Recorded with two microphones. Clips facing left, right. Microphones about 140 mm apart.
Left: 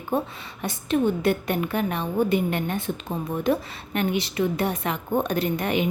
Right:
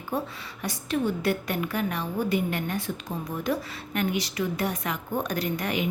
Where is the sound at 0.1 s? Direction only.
25° left (ahead or behind).